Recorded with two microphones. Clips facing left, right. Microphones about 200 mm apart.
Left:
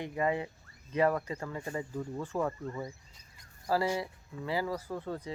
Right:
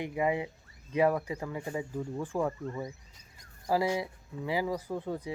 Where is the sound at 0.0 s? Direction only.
15° right (ahead or behind).